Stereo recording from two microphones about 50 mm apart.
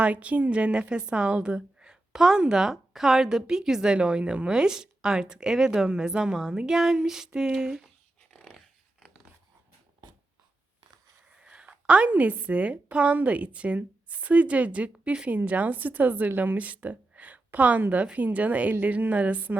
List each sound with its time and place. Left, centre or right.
0.0 s a woman's voice: right; by 7.9 s centre
8.3 s dog: left
8.5 s dog: centre
11.3 s a woman's voice: right